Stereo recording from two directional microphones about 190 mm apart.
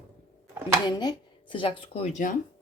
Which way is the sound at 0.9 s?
20° left (ahead or behind).